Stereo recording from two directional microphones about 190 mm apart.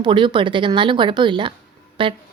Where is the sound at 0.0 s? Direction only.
25° right (ahead or behind).